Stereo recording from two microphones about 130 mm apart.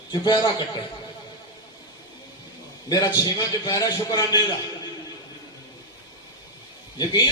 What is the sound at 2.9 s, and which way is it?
A man's voice, 30° left (ahead or behind).